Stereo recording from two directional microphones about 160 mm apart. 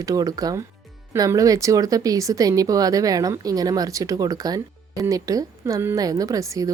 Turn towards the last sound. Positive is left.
turn(degrees=-20)  # may be behind; listen again after turning